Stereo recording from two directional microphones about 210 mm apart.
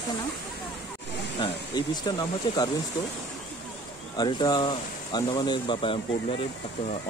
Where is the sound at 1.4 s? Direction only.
20° left (ahead or behind).